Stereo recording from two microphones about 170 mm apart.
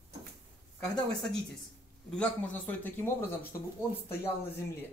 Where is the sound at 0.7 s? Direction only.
5° left (ahead or behind).